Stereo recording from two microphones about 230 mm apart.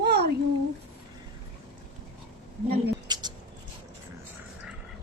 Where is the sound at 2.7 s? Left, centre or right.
Centre.